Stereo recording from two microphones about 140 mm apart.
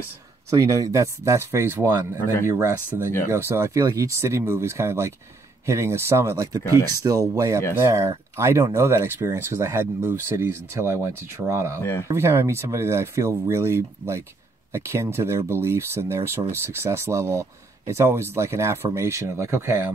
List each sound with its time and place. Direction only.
0.5 s speech: 20° right (ahead or behind)
11.8 s speech: 15° left (ahead or behind)
12.1 s speech: 20° right (ahead or behind)